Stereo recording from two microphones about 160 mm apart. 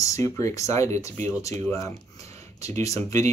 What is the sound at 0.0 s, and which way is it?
Speech, 20° left (ahead or behind).